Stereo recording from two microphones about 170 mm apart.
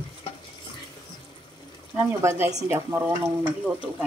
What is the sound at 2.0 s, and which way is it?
Speech, 15° right (ahead or behind).